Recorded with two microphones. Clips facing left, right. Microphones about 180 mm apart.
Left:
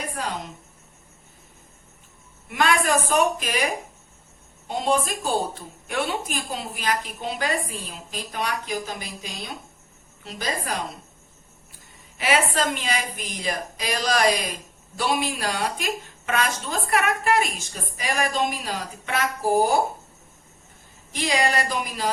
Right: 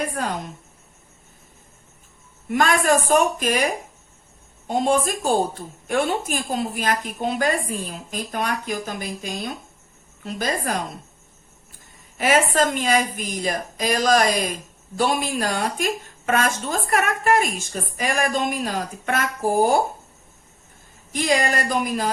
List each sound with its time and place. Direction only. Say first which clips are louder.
0.2 s a sound: right 1 dB; 50° right (ahead or behind)
2.5 s a woman's voice: right 3 dB; 45° right (ahead or behind)
4.7 s a woman's voice: right 3 dB; 45° right (ahead or behind)
12.1 s a woman's voice: right 4 dB; 45° right (ahead or behind)
21.1 s a woman's voice: right 2 dB; 45° right (ahead or behind)